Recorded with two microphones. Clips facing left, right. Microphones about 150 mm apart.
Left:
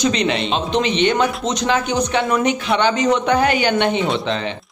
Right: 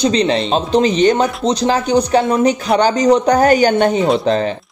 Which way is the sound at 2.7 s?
40° right (ahead or behind).